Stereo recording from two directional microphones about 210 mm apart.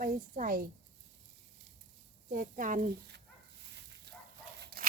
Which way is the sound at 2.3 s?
40° right (ahead or behind).